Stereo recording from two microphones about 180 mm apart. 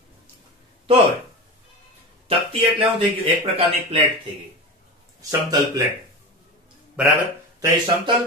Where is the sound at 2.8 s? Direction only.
30° right (ahead or behind).